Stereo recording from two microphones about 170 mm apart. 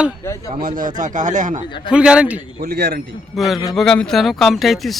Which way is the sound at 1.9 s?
5° right (ahead or behind).